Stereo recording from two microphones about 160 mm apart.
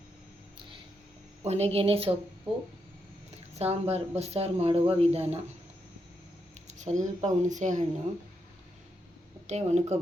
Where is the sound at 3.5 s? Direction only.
40° right (ahead or behind).